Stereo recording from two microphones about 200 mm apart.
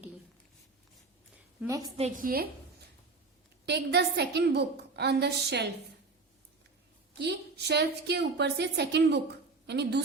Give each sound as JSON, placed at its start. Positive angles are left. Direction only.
{"t": 1.6, "sound": "a woman's voice", "side_deg": -15}
{"t": 2.0, "sound": "a woman's voice", "side_deg": -45}
{"t": 3.7, "sound": "a woman's voice", "side_deg": -55}
{"t": 7.2, "sound": "a woman's voice", "side_deg": -55}